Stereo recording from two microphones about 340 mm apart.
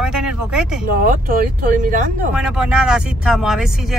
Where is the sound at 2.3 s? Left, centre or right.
Centre.